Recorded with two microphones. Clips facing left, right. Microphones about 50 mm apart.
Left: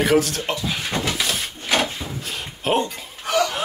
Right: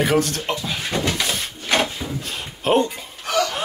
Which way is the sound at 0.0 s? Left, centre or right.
Centre.